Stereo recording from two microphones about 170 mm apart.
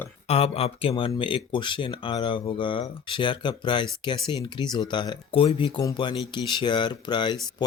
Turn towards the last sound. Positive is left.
turn(degrees=25)  # may be behind; listen again after turning